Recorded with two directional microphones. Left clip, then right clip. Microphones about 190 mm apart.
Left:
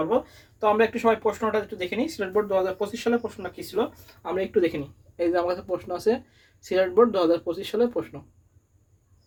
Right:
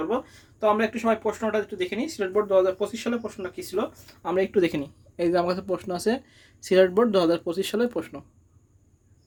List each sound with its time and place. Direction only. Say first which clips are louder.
0.6 s speech: left 2 dB; 30° right (ahead or behind)
4.0 s speech: right 3 dB; 50° right (ahead or behind)